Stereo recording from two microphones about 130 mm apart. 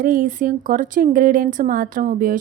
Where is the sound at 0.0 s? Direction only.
90° right.